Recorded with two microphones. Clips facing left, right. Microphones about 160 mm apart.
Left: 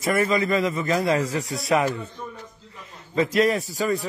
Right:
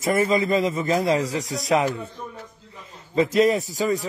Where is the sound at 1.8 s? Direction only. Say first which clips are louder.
Even; 10° right (ahead or behind).